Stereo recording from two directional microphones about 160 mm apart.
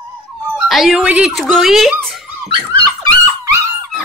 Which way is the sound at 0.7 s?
Centre (ahead or behind).